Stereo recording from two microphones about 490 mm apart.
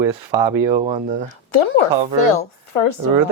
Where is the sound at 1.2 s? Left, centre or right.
Left.